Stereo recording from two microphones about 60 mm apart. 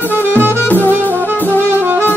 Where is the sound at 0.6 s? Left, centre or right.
Left.